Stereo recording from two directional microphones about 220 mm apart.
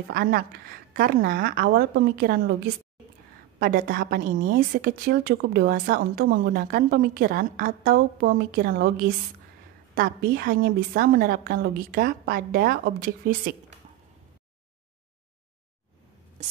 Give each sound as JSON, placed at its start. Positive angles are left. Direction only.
{"t": 0.1, "sound": "a woman's voice", "side_deg": -45}